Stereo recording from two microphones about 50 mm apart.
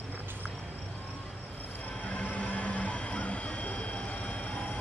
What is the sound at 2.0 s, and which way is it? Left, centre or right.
Train, left.